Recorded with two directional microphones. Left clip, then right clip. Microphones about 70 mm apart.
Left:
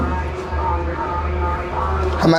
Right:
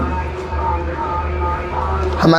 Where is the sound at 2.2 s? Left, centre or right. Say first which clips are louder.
Right 2 dB; right.